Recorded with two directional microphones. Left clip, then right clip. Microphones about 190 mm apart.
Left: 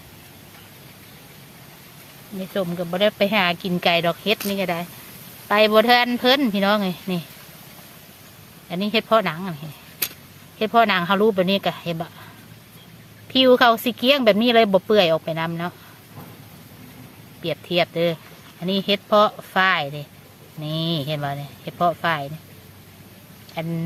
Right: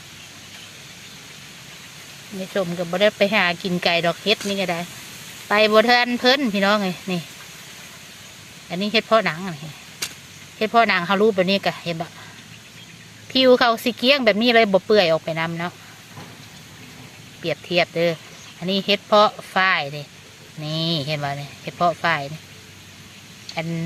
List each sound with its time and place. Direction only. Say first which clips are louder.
2.4 s speech: right 1 dB; centre (ahead or behind)
8.7 s speech: right 1 dB; 5° left (ahead or behind)
10.6 s speech: even; 5° left (ahead or behind)
13.3 s speech: left 1 dB; 5° left (ahead or behind)
17.4 s speech: right 1 dB; centre (ahead or behind)